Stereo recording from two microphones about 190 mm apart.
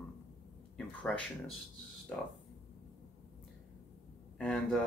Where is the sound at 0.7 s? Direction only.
5° left (ahead or behind).